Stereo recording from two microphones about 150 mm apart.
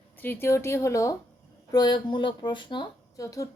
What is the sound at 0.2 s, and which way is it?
A woman's voice, 15° left (ahead or behind).